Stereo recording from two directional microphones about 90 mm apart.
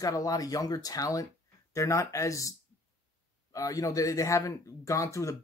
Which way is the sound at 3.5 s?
40° left (ahead or behind).